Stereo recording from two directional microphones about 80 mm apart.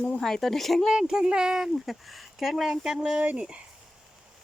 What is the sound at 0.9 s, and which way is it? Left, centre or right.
Speech, centre.